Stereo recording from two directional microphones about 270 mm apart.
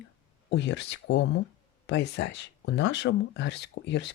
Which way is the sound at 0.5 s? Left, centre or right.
Left.